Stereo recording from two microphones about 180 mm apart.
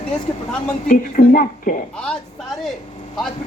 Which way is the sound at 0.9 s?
50° left (ahead or behind).